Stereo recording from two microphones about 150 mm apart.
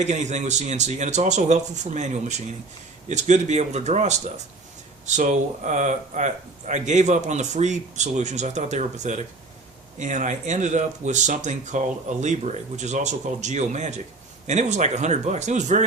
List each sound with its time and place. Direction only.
0.0 s speech: 50° right (ahead or behind)